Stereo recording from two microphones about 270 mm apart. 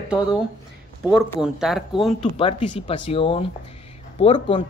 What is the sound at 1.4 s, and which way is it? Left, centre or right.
Speech, centre.